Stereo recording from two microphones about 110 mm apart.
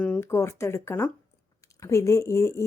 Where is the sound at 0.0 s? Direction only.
15° left (ahead or behind).